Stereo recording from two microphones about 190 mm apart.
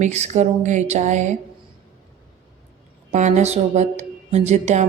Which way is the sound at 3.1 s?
40° right (ahead or behind).